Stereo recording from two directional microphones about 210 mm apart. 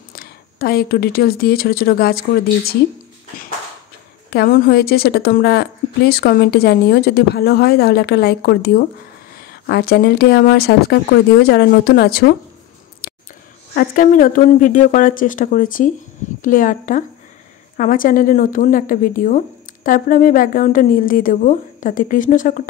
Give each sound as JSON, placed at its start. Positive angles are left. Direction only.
{"t": 0.1, "sound": "speech", "side_deg": 45}
{"t": 4.3, "sound": "a woman's voice", "side_deg": 45}
{"t": 13.0, "sound": "a sound", "side_deg": 45}
{"t": 13.7, "sound": "a woman's voice", "side_deg": 40}